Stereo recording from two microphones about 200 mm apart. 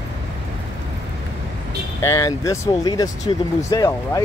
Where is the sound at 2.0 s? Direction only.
15° left (ahead or behind).